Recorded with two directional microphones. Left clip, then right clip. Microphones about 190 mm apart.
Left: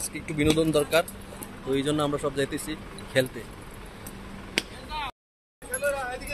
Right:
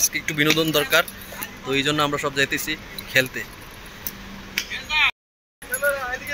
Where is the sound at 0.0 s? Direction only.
5° left (ahead or behind).